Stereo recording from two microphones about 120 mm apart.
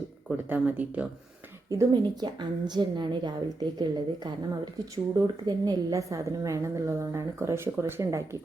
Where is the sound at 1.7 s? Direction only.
35° right (ahead or behind).